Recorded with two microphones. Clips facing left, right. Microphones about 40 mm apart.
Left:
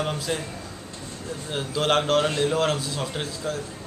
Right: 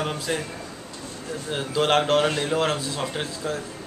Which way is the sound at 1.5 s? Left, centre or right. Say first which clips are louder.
Right 2 dB; centre.